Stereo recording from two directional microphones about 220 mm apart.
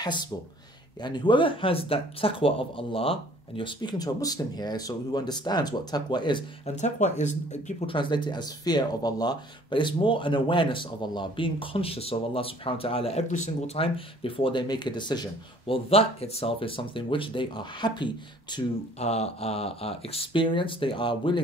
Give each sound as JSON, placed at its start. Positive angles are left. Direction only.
{"t": 0.0, "sound": "speech", "side_deg": 20}
{"t": 6.7, "sound": "speech", "side_deg": 30}